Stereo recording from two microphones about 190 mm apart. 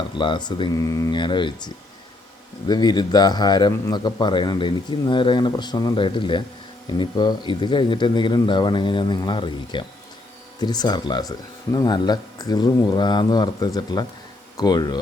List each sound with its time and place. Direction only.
0.2 s a man's voice: 25° left (ahead or behind)